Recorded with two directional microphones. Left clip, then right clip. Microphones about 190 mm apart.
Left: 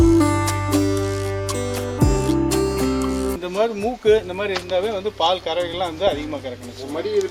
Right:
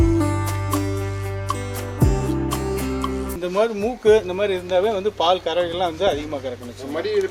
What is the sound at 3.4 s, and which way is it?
Speech, 50° right (ahead or behind).